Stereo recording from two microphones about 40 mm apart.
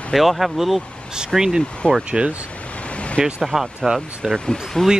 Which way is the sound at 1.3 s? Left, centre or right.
Centre.